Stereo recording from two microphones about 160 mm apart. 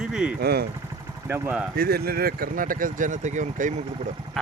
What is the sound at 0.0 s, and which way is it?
Vehicle, 5° right (ahead or behind).